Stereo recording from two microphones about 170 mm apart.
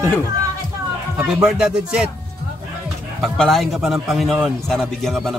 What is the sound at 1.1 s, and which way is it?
Speech, 10° right (ahead or behind).